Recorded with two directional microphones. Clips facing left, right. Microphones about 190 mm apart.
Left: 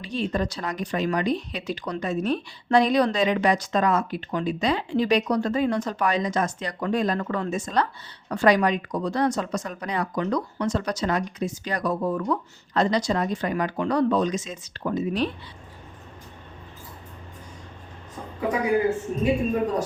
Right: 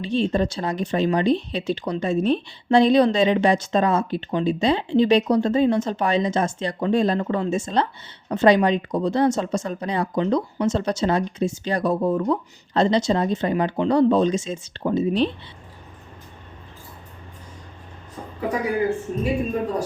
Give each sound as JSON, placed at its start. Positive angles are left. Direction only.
{"t": 0.0, "sound": "speech", "side_deg": -25}